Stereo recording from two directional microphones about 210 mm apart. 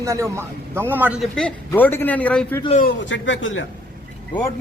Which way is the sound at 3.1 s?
65° left (ahead or behind).